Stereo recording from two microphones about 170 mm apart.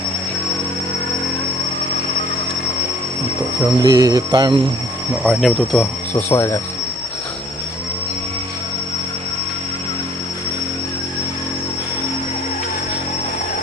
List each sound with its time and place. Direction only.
3.8 s speech: 20° right (ahead or behind)
5.2 s speech: centre (ahead or behind)